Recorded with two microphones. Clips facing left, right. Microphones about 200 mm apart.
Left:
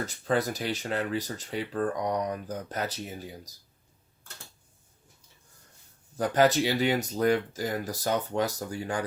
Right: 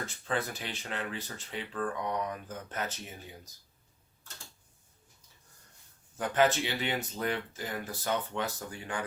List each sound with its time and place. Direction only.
0.0 s speech: 40° left (ahead or behind)
6.1 s speech: 35° left (ahead or behind)